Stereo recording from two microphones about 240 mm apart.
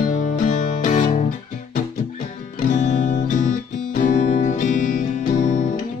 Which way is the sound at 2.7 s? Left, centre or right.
Left.